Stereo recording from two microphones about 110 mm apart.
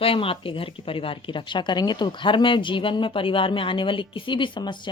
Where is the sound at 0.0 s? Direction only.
55° left (ahead or behind).